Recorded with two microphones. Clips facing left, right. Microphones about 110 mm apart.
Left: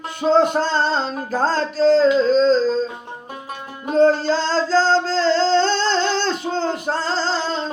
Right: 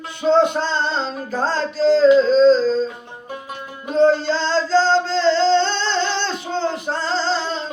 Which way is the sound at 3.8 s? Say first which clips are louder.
Even; 40° left (ahead or behind).